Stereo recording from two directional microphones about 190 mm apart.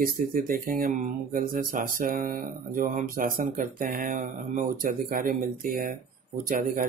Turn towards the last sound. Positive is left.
turn(degrees=-45)  # may be behind; listen again after turning